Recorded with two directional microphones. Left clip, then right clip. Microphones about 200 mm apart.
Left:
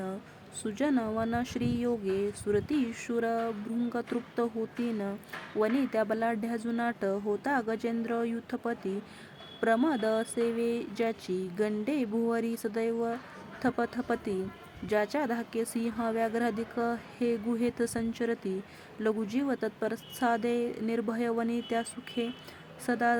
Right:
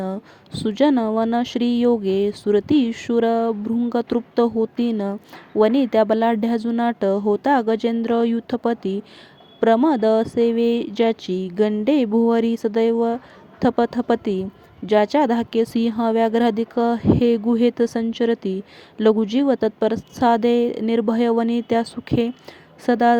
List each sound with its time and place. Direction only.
0.0 s speech: 30° right (ahead or behind)